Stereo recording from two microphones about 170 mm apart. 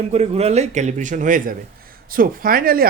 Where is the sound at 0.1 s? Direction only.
40° right (ahead or behind).